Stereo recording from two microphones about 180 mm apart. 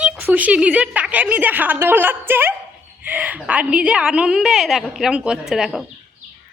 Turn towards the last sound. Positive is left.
turn(degrees=0)  # may be behind; listen again after turning